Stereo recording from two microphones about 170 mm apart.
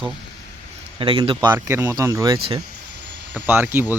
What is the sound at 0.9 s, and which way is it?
Speech, 30° right (ahead or behind).